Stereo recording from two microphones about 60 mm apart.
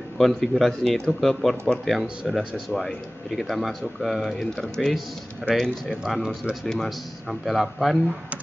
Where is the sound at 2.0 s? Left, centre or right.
Centre.